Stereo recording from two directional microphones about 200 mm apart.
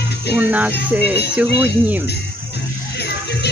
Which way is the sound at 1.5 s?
55° left (ahead or behind).